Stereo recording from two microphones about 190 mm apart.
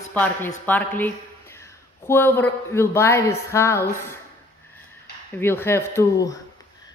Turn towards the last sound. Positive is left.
turn(degrees=20)  # may be behind; listen again after turning